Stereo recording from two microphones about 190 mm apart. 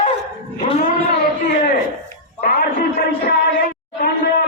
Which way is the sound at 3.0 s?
50° left (ahead or behind).